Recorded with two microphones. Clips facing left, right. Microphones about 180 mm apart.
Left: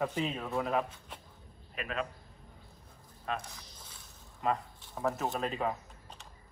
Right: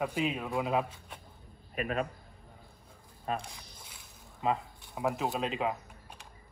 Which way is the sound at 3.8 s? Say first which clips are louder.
Right 1 dB; 15° right (ahead or behind).